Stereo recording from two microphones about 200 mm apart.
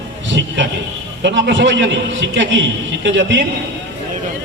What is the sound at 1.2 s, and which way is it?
A man's voice, 60° right (ahead or behind).